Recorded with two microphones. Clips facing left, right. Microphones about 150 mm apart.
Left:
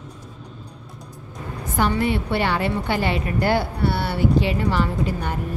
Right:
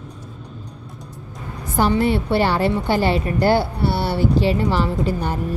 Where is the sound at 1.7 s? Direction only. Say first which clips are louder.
Right 4 dB; 35° right (ahead or behind).